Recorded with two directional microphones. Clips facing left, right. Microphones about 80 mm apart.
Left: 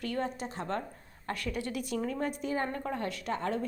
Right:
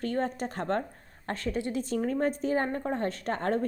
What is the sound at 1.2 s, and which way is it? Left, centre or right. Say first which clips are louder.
A woman's voice: right 4 dB; right.